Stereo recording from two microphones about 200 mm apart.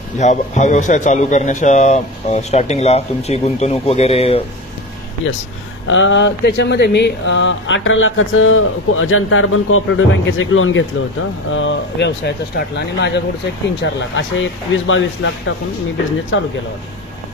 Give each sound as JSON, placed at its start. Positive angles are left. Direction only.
{"t": 0.2, "sound": "a man's voice", "side_deg": 35}
{"t": 5.9, "sound": "speech", "side_deg": 70}